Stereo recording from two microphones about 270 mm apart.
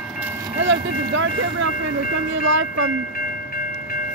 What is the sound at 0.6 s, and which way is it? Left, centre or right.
Vehicle, right.